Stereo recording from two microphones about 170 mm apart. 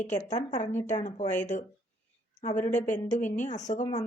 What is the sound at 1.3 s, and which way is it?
A woman's voice, 45° left (ahead or behind).